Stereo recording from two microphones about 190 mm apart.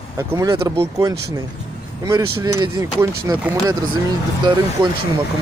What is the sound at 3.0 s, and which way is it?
Speech, 15° right (ahead or behind).